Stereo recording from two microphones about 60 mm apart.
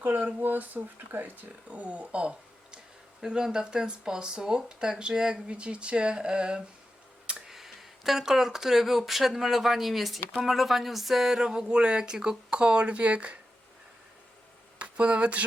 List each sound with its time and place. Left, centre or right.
0.0 s speech: right
14.8 s speech: centre